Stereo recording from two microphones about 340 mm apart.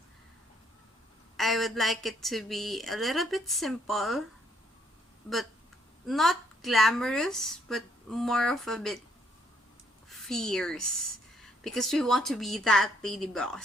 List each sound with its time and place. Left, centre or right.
1.4 s a woman's voice: centre
6.1 s a woman's voice: centre
10.1 s a woman's voice: centre